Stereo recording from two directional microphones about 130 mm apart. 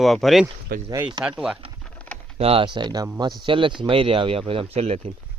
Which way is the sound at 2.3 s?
45° right (ahead or behind).